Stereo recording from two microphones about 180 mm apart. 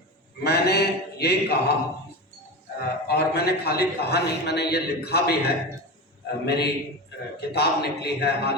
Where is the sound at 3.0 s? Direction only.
65° left (ahead or behind).